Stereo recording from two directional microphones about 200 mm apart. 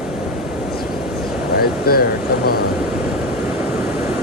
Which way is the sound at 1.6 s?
50° left (ahead or behind).